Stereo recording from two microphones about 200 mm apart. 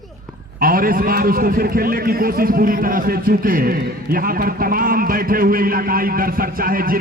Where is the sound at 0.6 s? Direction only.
45° right (ahead or behind).